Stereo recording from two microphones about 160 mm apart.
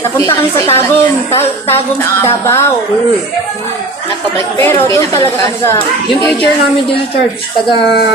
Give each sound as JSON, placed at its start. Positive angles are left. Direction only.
{"t": 0.2, "sound": "speech", "side_deg": 15}
{"t": 2.2, "sound": "speech", "side_deg": 15}
{"t": 4.5, "sound": "speech", "side_deg": 15}